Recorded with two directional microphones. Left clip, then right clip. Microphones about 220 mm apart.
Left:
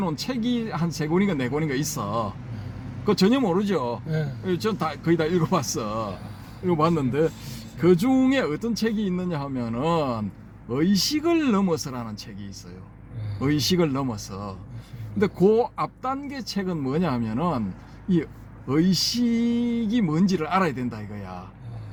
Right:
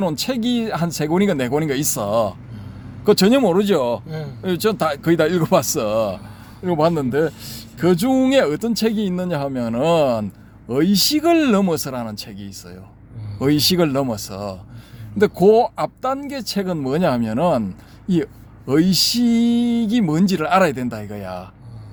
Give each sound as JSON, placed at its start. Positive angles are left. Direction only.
{"t": 0.0, "sound": "speech", "side_deg": -50}
{"t": 18.7, "sound": "speech", "side_deg": -50}